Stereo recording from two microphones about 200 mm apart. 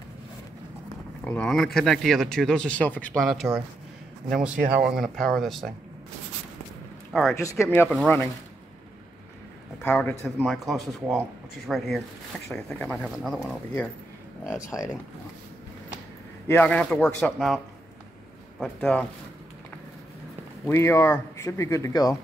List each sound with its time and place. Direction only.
1.2 s speech: 5° left (ahead or behind)
7.1 s speech: centre (ahead or behind)
7.3 s speech: 15° left (ahead or behind)
9.8 s speech: 10° left (ahead or behind)
14.5 s speech: 15° left (ahead or behind)
16.4 s speech: 10° left (ahead or behind)
18.6 s speech: 5° left (ahead or behind)
20.6 s speech: 15° left (ahead or behind)